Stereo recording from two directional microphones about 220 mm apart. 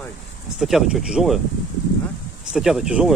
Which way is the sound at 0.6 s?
Centre (ahead or behind).